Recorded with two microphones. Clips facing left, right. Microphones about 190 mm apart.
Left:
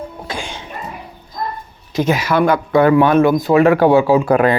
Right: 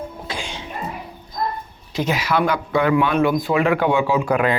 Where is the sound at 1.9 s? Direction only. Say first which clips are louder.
Left 5 dB; 45° left (ahead or behind).